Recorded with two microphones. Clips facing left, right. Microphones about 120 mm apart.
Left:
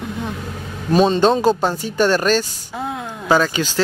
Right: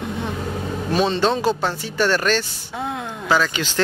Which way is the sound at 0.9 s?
45° left (ahead or behind).